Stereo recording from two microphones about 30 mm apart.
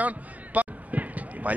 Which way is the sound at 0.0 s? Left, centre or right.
Right.